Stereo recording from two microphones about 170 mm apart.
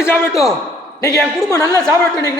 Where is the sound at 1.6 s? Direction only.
20° left (ahead or behind).